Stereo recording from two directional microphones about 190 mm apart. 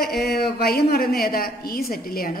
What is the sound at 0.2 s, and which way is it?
A woman's voice, 55° left (ahead or behind).